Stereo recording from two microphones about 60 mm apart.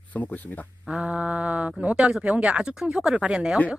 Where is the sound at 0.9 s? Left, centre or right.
Centre.